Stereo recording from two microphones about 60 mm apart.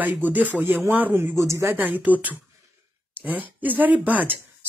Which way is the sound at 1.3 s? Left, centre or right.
Right.